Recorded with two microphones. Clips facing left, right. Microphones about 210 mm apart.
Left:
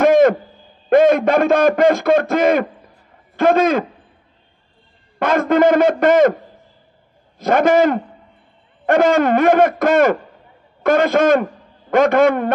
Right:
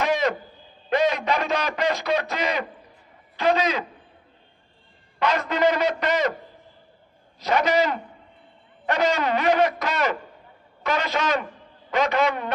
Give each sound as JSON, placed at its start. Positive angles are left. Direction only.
{"t": 0.0, "sound": "owl", "side_deg": 50}
{"t": 0.8, "sound": "a man's voice", "side_deg": 50}
{"t": 5.2, "sound": "a man's voice", "side_deg": 50}
{"t": 7.3, "sound": "a man's voice", "side_deg": 50}